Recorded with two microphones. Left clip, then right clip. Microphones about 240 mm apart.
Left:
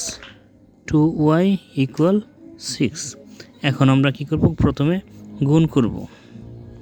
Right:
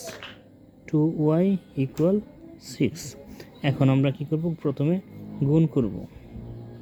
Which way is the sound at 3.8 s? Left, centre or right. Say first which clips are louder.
Left 6 dB; left.